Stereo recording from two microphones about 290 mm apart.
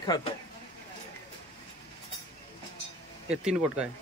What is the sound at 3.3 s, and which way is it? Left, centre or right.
Speech, centre.